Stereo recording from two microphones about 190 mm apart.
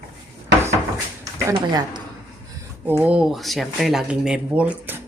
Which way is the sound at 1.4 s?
20° right (ahead or behind).